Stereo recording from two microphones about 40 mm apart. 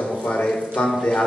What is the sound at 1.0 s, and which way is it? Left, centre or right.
Speech, left.